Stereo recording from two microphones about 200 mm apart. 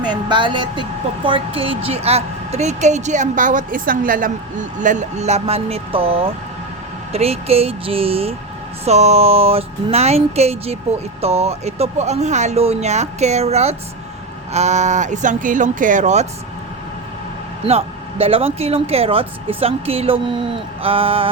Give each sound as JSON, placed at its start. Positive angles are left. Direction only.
{"t": 0.0, "sound": "speech", "side_deg": -20}
{"t": 17.7, "sound": "speech", "side_deg": -30}